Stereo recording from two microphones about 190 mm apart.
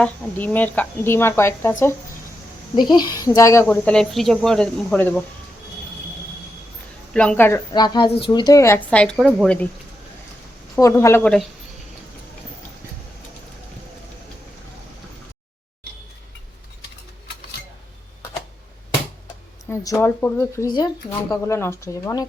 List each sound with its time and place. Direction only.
0.0 s speech: 10° left (ahead or behind)
2.7 s speech: 20° left (ahead or behind); by 5.2 s 5° left (ahead or behind)
7.1 s speech: 5° left (ahead or behind)
7.7 s speech: 25° left (ahead or behind); by 9.1 s 5° left (ahead or behind)
9.1 s speech: 5° right (ahead or behind)
10.8 s speech: 15° left (ahead or behind)
19.7 s speech: 15° left (ahead or behind)